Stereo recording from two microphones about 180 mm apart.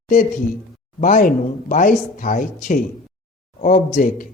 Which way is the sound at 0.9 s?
50° left (ahead or behind).